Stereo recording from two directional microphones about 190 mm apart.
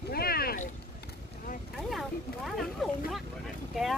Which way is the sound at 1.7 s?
Centre (ahead or behind).